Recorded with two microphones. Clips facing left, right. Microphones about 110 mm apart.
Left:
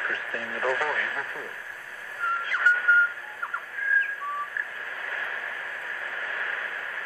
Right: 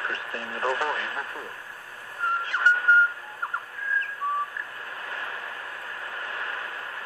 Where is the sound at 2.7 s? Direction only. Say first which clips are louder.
Right 1 dB; 80° right.